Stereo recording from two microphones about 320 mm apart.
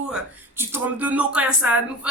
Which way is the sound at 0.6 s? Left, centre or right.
Centre.